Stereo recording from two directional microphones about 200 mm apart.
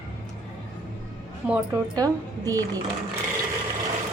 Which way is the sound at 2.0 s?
20° right (ahead or behind).